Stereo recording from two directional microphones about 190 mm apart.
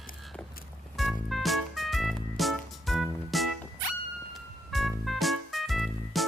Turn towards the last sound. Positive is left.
turn(degrees=0)  # may be behind; listen again after turning